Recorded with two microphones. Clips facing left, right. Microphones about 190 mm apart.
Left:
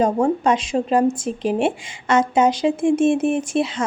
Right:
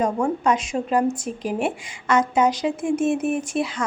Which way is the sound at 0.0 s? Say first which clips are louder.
Left 4 dB; 30° left (ahead or behind).